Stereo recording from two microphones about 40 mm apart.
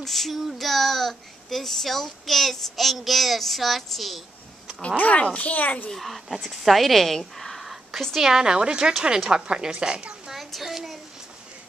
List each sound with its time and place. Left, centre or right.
0.0 s a child's voice: centre
4.9 s a child's voice: left
5.9 s speech: centre
8.3 s a woman's voice: centre
10.3 s a sound: centre